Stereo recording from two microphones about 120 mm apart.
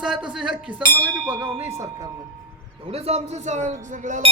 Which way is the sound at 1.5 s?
20° right (ahead or behind).